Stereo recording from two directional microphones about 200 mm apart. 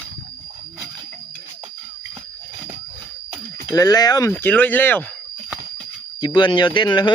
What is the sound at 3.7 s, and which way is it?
Speech, 20° left (ahead or behind).